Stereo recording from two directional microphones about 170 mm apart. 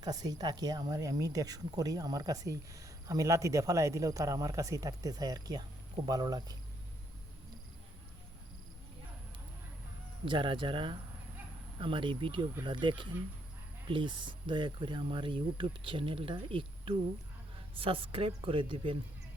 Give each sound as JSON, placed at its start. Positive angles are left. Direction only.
{"t": 0.0, "sound": "speech", "side_deg": -20}
{"t": 10.2, "sound": "a woman's voice", "side_deg": -30}